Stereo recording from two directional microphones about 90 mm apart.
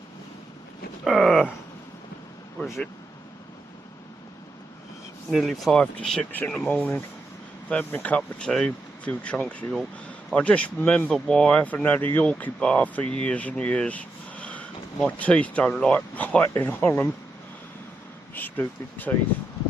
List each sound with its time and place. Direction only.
1.0 s speech: centre (ahead or behind)
5.3 s speech: centre (ahead or behind)
5.7 s speech: 10° left (ahead or behind)
6.3 s speech: 20° left (ahead or behind)
18.3 s speech: 20° left (ahead or behind)